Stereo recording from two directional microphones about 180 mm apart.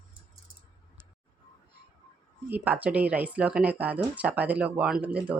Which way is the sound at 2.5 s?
10° right (ahead or behind).